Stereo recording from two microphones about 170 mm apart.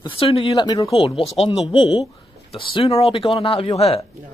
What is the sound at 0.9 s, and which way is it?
Speech, 30° left (ahead or behind).